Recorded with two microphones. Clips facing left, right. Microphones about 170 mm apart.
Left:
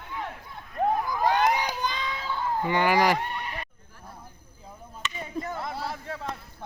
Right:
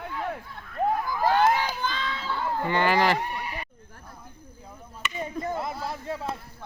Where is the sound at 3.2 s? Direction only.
10° right (ahead or behind).